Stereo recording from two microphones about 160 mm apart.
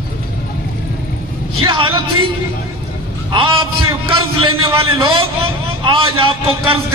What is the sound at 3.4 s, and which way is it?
A man's voice, 30° right (ahead or behind).